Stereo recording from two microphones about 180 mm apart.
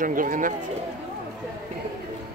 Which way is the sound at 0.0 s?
50° right (ahead or behind).